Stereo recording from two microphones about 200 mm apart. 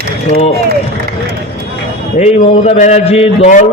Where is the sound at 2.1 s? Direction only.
35° left (ahead or behind).